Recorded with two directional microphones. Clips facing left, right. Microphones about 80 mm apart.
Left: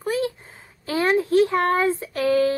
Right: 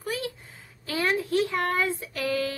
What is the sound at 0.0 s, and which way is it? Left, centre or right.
A woman's voice, left.